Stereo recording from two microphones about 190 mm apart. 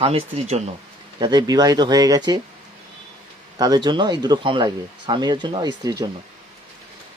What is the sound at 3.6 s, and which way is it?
Speech, 20° right (ahead or behind).